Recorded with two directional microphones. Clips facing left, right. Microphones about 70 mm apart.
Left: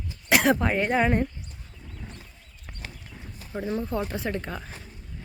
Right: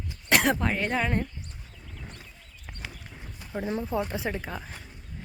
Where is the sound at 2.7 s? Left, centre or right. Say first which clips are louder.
Even; centre.